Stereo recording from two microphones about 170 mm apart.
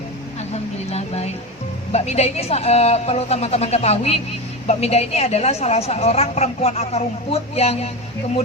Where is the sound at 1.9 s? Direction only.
40° left (ahead or behind).